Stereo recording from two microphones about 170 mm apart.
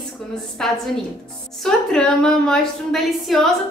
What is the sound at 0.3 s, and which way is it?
A woman's voice, centre (ahead or behind).